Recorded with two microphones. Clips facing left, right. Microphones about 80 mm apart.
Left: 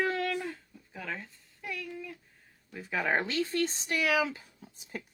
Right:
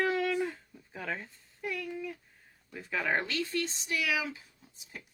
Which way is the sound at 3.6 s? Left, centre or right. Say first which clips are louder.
Left 3 dB; left.